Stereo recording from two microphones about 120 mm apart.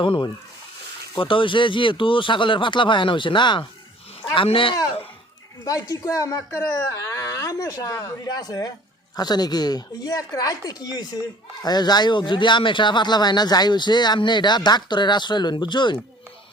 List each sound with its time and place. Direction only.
0.0 s speech: 45° left (ahead or behind)
5.6 s speech: 30° left (ahead or behind)